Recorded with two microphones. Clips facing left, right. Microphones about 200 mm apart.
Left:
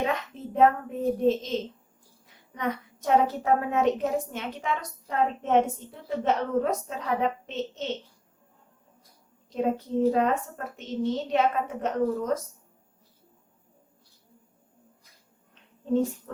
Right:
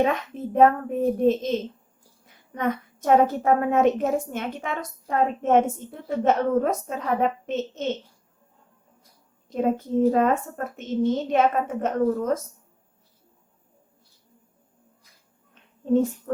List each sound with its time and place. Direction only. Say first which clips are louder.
0.0 s a woman's voice: right 6 dB; 50° right (ahead or behind)
9.5 s a woman's voice: right 3 dB; 50° right (ahead or behind)
15.9 s a woman's voice: right 4 dB; 50° right (ahead or behind)